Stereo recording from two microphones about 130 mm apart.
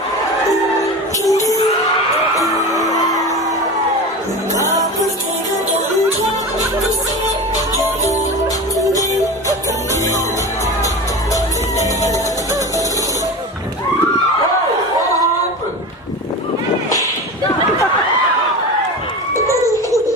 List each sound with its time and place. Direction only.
1.2 s music: 25° left (ahead or behind)
2.7 s music: 25° left (ahead or behind)
8.8 s music: 25° left (ahead or behind)